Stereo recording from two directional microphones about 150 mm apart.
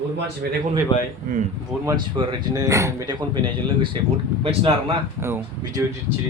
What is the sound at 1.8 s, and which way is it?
Speech, 30° right (ahead or behind).